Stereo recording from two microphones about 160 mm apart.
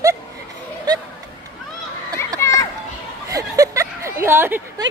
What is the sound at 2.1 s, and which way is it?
Children playing, 20° left (ahead or behind).